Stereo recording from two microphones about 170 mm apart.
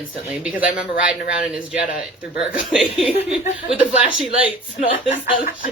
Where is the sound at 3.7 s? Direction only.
10° right (ahead or behind).